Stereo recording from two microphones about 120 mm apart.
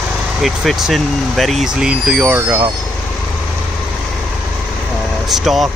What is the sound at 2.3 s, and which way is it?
Speech, 20° right (ahead or behind).